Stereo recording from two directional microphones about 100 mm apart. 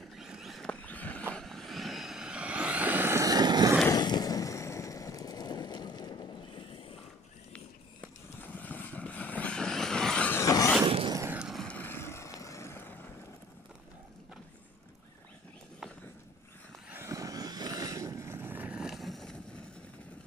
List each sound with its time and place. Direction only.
0.1 s a sound: 5° right (ahead or behind)
0.7 s a sound: 15° left (ahead or behind)
1.3 s vehicle: 5° left (ahead or behind); by 3.2 s 20° right (ahead or behind)
3.2 s vehicle: 40° right (ahead or behind)
3.9 s a sound: 40° left (ahead or behind)
7.5 s vehicle: 15° left (ahead or behind)
10.3 s vehicle: 30° left (ahead or behind)
11.3 s vehicle: 5° right (ahead or behind)
11.6 s vehicle: 15° left (ahead or behind)
16.9 s vehicle: 30° right (ahead or behind); by 19.6 s 5° left (ahead or behind)